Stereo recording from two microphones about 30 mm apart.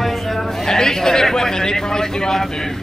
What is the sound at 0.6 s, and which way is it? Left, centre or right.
A man's voice, centre.